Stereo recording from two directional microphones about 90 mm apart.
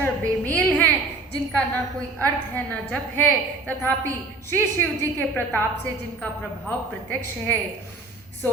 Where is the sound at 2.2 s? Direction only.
20° left (ahead or behind).